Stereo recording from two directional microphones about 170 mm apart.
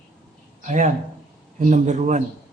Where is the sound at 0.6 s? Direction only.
45° right (ahead or behind).